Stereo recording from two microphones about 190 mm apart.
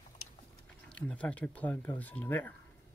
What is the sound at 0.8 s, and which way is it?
Speech, 5° left (ahead or behind).